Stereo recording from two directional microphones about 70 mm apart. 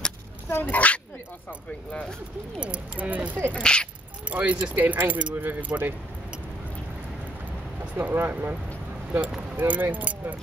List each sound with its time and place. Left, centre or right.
0.5 s speech: left
2.6 s speech: right
3.5 s speech: centre
4.3 s speech: right
7.8 s speech: right
9.6 s speech: right